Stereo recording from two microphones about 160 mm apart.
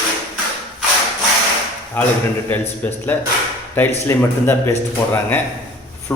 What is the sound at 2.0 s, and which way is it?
A man's voice, 10° left (ahead or behind).